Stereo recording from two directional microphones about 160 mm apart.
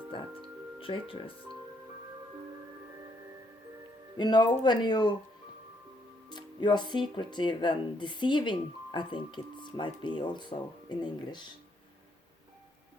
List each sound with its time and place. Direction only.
0.1 s speech: 35° left (ahead or behind)
4.2 s speech: 25° left (ahead or behind)
6.2 s speech: 25° left (ahead or behind)